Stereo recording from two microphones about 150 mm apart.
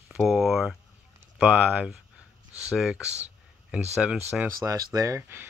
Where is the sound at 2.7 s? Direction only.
5° right (ahead or behind).